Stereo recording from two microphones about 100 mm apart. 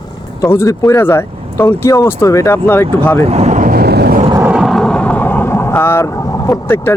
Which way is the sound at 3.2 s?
90° right.